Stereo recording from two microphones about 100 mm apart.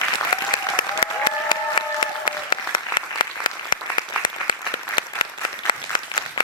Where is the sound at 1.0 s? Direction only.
50° left (ahead or behind).